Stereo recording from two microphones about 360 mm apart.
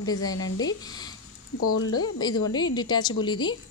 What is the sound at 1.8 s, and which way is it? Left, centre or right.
Speech, left.